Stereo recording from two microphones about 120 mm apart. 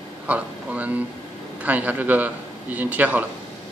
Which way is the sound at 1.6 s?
15° right (ahead or behind).